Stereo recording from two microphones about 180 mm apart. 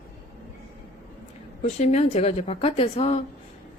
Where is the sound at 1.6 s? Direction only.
40° left (ahead or behind).